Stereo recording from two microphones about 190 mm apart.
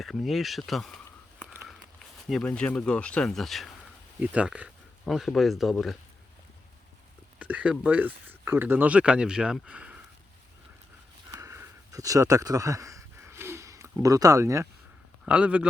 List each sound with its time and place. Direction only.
0.0 s speech: centre (ahead or behind)
7.3 s speech: 5° right (ahead or behind)
11.3 s a sound: 15° right (ahead or behind)
15.3 s speech: 5° right (ahead or behind)